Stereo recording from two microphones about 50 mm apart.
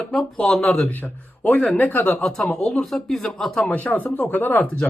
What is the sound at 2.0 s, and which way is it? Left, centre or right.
Speech, centre.